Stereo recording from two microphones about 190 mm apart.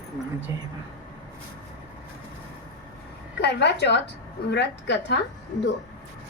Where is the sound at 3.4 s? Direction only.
60° left (ahead or behind).